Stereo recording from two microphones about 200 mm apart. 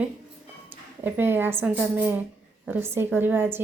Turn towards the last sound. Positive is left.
turn(degrees=-10)  # may be behind; listen again after turning